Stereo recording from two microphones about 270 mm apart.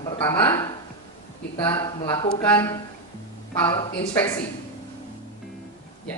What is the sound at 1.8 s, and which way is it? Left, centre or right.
Speech, centre.